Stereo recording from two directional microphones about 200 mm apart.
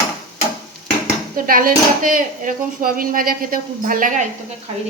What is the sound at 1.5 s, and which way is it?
Speech, 45° right (ahead or behind).